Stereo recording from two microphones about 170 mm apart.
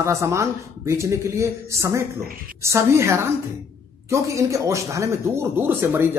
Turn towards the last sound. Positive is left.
turn(degrees=-10)  # may be behind; listen again after turning